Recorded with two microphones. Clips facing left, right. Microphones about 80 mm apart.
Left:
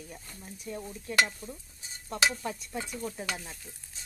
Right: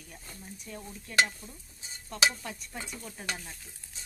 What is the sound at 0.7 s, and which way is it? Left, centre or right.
Speech, centre.